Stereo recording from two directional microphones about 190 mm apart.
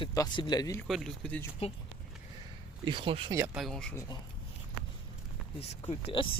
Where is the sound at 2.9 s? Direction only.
25° right (ahead or behind).